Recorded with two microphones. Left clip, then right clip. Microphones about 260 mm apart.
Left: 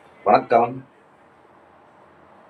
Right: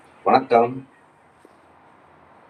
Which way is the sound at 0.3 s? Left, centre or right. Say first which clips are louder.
Even; centre.